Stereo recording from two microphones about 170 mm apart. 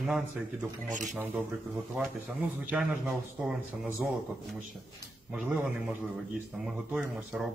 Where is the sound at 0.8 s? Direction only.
45° right (ahead or behind).